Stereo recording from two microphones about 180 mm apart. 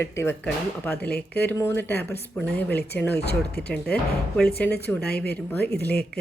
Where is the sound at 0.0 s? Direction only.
15° left (ahead or behind).